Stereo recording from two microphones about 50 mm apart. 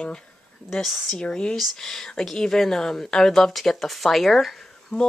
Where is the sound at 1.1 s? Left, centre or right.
Centre.